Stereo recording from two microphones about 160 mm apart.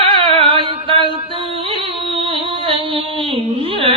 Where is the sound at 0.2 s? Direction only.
35° right (ahead or behind).